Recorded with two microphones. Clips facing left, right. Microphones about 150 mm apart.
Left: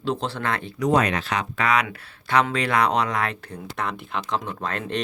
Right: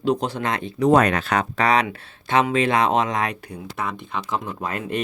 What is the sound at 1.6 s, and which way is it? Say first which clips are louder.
Speech: right 2 dB; 35° right (ahead or behind).